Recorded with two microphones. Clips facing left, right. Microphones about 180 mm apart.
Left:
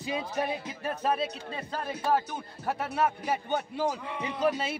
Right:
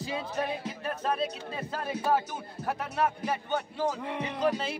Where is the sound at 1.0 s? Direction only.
5° left (ahead or behind).